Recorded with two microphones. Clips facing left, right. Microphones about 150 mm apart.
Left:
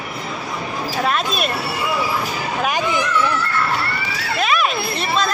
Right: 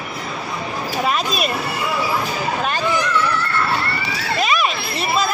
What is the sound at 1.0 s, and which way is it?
Speech, centre (ahead or behind).